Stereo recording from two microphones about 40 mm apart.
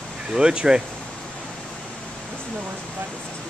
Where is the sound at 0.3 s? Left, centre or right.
Right.